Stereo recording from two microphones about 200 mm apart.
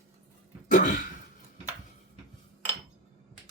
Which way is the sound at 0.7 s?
40° left (ahead or behind).